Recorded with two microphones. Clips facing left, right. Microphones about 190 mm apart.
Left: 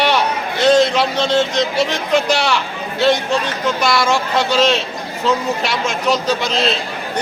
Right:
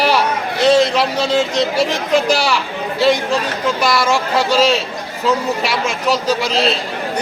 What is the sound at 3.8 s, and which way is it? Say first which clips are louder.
Speech: even; 5° right (ahead or behind).